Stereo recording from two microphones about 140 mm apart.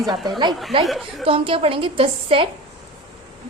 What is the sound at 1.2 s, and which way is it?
A woman's voice, 40° right (ahead or behind).